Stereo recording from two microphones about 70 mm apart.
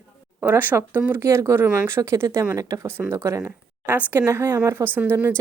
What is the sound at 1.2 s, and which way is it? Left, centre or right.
Speech, right.